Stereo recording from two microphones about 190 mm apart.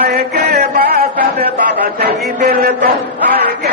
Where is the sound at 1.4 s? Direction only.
55° right (ahead or behind).